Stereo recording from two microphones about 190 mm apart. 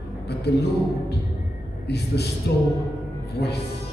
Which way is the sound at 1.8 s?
60° left (ahead or behind).